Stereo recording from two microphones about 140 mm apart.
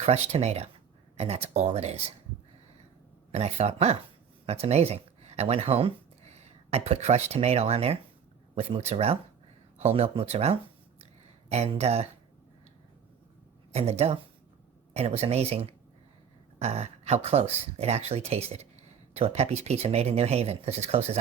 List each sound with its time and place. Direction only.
0.0 s speech: 50° right (ahead or behind)
3.3 s speech: 50° right (ahead or behind)
13.7 s speech: 45° right (ahead or behind)